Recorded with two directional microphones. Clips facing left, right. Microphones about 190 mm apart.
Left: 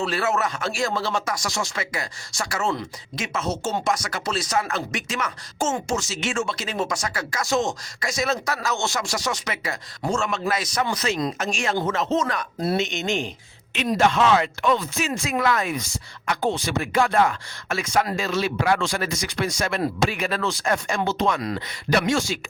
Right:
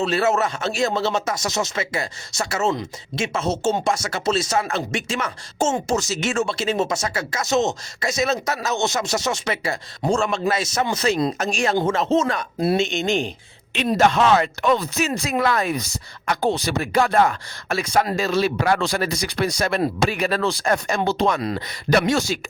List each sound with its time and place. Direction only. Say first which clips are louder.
0.0 s speech: right 4 dB; 25° right (ahead or behind)
6.0 s speech: right 4 dB; 40° right (ahead or behind)
21.9 s speech: right 3 dB; 40° right (ahead or behind)